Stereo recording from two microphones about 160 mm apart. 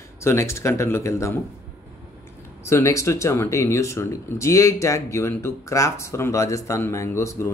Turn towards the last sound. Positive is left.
turn(degrees=20)  # may be behind; listen again after turning